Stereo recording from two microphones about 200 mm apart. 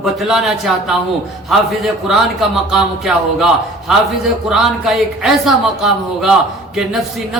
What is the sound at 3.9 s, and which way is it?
A man's voice, centre (ahead or behind).